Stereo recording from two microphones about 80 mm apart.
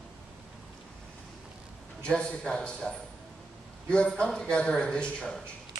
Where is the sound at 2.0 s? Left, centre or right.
Centre.